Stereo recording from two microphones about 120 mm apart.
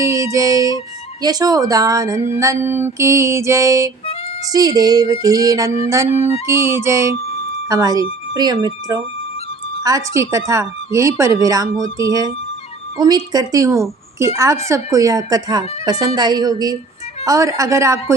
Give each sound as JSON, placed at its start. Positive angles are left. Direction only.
{"t": 0.0, "sound": "music", "side_deg": -25}
{"t": 1.2, "sound": "speech", "side_deg": -30}
{"t": 2.3, "sound": "music", "side_deg": -25}
{"t": 4.5, "sound": "speech", "side_deg": -30}
{"t": 6.1, "sound": "music", "side_deg": 60}
{"t": 6.5, "sound": "music", "side_deg": -25}
{"t": 7.7, "sound": "speech", "side_deg": -30}
{"t": 9.8, "sound": "music", "side_deg": -30}
{"t": 10.5, "sound": "speech", "side_deg": -25}
{"t": 17.2, "sound": "music", "side_deg": -25}